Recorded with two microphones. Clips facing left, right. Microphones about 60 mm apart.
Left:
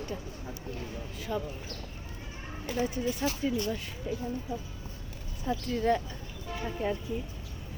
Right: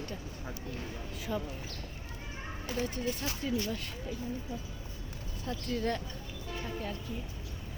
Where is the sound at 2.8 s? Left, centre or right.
Left.